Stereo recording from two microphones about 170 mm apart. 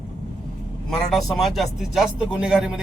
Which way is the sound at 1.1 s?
Centre (ahead or behind).